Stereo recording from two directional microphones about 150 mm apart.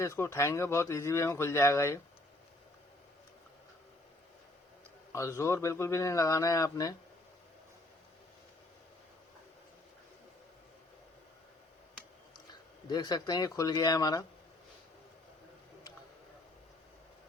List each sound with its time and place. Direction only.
0.0 s speech: 15° left (ahead or behind)
5.1 s speech: 20° left (ahead or behind)
12.9 s speech: 25° left (ahead or behind)